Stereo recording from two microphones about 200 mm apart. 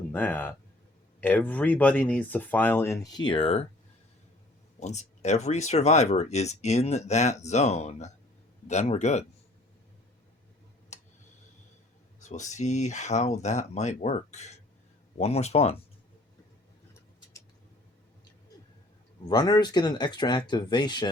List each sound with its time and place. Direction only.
0.1 s speech: 10° left (ahead or behind); by 3.7 s 30° left (ahead or behind)
4.8 s speech: 35° left (ahead or behind)
10.9 s tick-tock: 35° left (ahead or behind)
12.2 s speech: 35° left (ahead or behind)
19.3 s speech: 20° left (ahead or behind)